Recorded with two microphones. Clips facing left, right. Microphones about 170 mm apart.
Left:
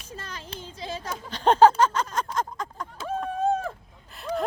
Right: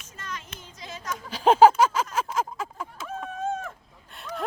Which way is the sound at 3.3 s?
35° left (ahead or behind).